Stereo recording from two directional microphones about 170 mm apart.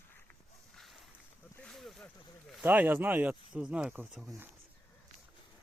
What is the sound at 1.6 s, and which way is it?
Boat, centre (ahead or behind).